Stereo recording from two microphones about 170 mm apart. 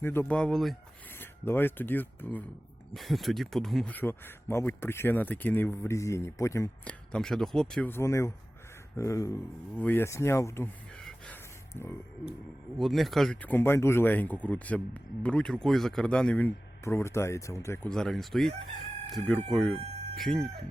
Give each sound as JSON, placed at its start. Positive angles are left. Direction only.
{"t": 0.0, "sound": "chicken", "side_deg": 15}
{"t": 1.2, "sound": "speech", "side_deg": 10}
{"t": 2.9, "sound": "speech", "side_deg": 0}
{"t": 6.8, "sound": "chicken", "side_deg": 5}
{"t": 9.0, "sound": "speech", "side_deg": 20}
{"t": 11.7, "sound": "speech", "side_deg": 15}
{"t": 12.7, "sound": "speech", "side_deg": 0}
{"t": 17.8, "sound": "chicken", "side_deg": 5}